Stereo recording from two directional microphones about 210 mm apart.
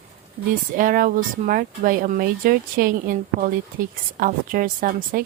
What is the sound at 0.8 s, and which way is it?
A woman's voice, 40° right (ahead or behind).